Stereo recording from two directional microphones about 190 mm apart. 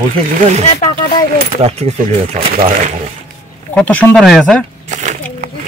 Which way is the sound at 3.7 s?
5° left (ahead or behind).